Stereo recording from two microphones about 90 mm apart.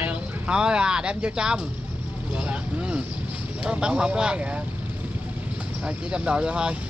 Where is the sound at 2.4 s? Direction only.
15° right (ahead or behind).